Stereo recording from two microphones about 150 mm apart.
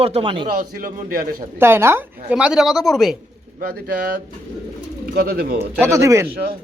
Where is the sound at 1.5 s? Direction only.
15° right (ahead or behind).